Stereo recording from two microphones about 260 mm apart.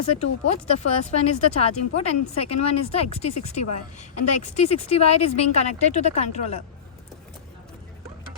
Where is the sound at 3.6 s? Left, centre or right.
Left.